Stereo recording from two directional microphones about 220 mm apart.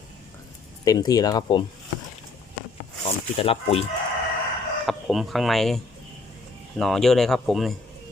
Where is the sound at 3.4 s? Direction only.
25° left (ahead or behind).